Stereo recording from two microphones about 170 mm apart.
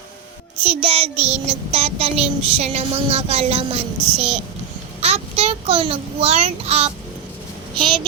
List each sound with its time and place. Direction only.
0.6 s child singing: 30° right (ahead or behind)
5.0 s a child's voice: 35° right (ahead or behind)